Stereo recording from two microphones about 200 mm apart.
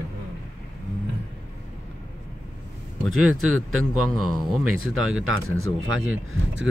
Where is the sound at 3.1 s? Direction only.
90° right.